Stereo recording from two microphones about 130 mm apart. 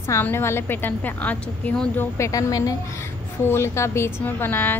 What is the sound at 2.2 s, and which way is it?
A woman's voice, 25° left (ahead or behind).